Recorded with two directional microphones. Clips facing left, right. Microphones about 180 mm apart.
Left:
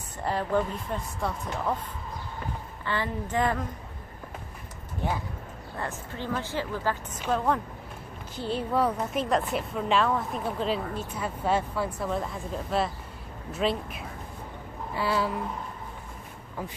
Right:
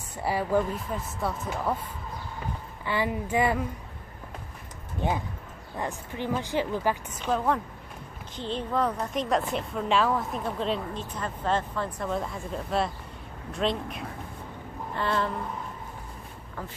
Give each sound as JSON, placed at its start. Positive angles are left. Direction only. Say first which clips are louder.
{"t": 0.2, "sound": "speech", "louder": "right 1 dB", "side_deg": -10}
{"t": 5.0, "sound": "speech", "louder": "right 2 dB", "side_deg": -20}
{"t": 7.2, "sound": "a woman's voice", "louder": "left 2 dB", "side_deg": 0}
{"t": 14.9, "sound": "a sound", "louder": "left 1 dB", "side_deg": 5}